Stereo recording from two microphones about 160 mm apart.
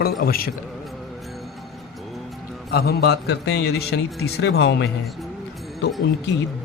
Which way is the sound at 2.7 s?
80° left.